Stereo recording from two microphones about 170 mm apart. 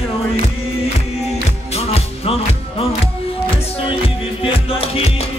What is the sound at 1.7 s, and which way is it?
Music, 35° left (ahead or behind).